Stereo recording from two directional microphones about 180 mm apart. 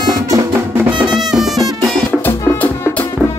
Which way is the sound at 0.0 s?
20° right (ahead or behind).